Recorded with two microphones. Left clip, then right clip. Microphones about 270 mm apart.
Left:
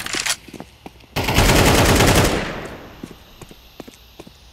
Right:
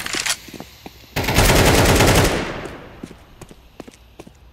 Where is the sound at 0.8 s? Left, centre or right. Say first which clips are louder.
Even; centre.